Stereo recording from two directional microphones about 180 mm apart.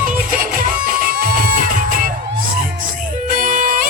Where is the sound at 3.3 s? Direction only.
50° right (ahead or behind).